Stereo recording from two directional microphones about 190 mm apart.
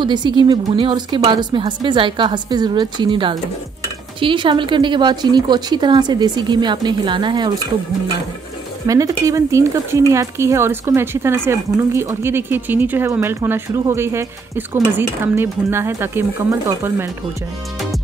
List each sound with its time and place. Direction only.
0.0 s a woman's voice: 25° right (ahead or behind)
8.8 s speech: 20° right (ahead or behind)